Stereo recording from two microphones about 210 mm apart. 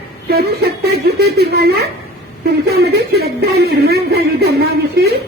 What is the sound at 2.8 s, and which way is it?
Music, 50° right (ahead or behind).